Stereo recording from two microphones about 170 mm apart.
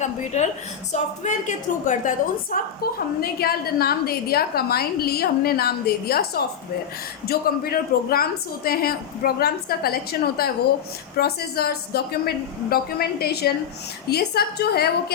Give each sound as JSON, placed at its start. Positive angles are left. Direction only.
{"t": 0.3, "sound": "a woman's voice", "side_deg": 45}
{"t": 2.8, "sound": "a woman's voice", "side_deg": 65}